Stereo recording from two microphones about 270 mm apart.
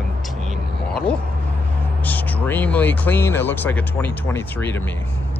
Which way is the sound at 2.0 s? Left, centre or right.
Centre.